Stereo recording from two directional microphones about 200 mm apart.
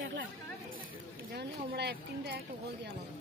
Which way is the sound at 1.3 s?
55° right (ahead or behind).